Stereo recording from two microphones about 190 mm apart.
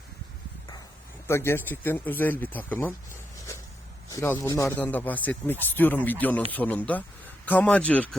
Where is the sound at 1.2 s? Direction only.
15° left (ahead or behind).